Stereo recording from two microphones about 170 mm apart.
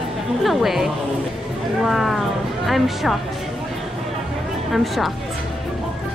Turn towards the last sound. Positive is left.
turn(degrees=0)  # may be behind; listen again after turning